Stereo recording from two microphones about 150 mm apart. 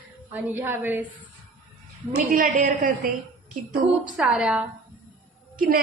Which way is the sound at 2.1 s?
65° right (ahead or behind).